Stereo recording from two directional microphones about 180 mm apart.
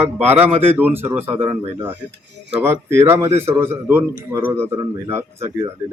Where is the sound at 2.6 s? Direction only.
15° right (ahead or behind).